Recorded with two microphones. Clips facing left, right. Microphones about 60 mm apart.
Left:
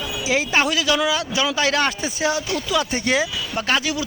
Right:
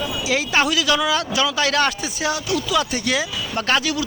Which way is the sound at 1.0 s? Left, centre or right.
Centre.